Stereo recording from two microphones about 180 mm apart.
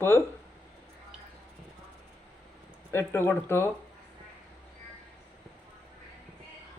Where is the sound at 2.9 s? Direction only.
15° left (ahead or behind).